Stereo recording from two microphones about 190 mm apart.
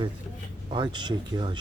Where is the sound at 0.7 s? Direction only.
25° right (ahead or behind).